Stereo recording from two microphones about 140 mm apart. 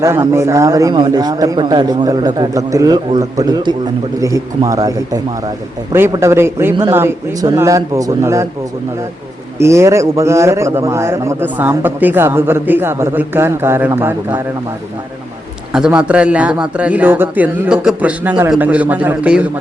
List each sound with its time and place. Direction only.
0.0 s a man's voice: 20° right (ahead or behind)
9.6 s a man's voice: 20° right (ahead or behind)
15.7 s a man's voice: 5° right (ahead or behind)